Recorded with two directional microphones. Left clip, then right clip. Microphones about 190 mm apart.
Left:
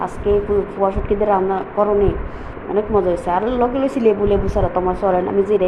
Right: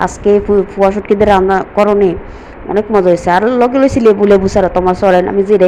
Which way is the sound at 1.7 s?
30° right (ahead or behind).